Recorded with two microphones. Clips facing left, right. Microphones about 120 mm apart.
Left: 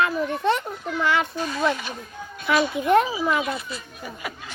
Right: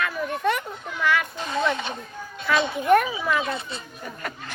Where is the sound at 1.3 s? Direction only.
20° right (ahead or behind).